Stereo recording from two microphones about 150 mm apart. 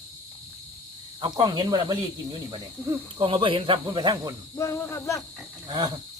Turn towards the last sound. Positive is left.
turn(degrees=-25)  # may be behind; listen again after turning